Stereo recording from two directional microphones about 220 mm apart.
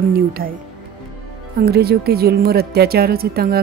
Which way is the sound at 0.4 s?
40° right (ahead or behind).